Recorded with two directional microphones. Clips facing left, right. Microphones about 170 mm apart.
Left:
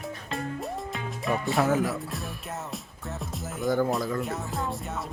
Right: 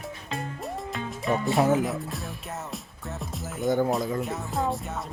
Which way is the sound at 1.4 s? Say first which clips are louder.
Right 3 dB; centre (ahead or behind).